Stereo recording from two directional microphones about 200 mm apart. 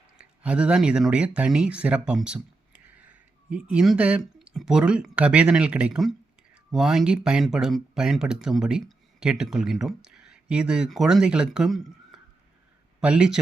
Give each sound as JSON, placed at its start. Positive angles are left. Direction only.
{"t": 0.2, "sound": "speech", "side_deg": -5}